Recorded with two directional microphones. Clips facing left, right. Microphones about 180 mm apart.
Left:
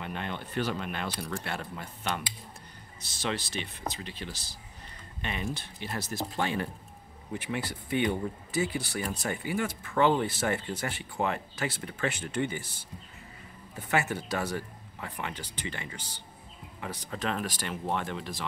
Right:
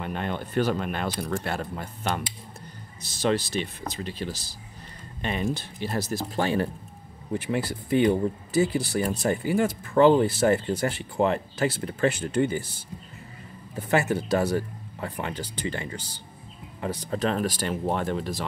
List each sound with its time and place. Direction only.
0.0 s speech: 45° right (ahead or behind)
13.7 s speech: 35° right (ahead or behind)